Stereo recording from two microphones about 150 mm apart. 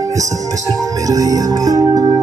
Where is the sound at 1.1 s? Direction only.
25° right (ahead or behind).